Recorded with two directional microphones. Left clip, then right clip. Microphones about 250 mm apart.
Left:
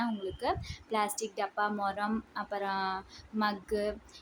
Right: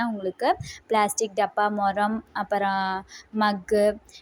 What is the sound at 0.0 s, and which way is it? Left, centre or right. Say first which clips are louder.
A woman's voice: right 9 dB; right.